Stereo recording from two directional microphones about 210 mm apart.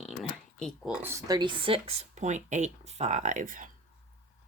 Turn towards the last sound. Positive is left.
turn(degrees=-40)  # may be behind; listen again after turning